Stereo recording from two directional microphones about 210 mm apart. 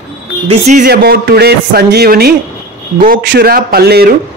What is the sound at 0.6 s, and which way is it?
Speech, 40° right (ahead or behind).